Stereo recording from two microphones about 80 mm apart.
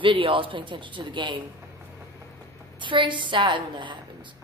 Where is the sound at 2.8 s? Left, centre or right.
Right.